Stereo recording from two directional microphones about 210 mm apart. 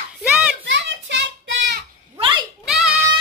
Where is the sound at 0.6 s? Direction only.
60° right (ahead or behind).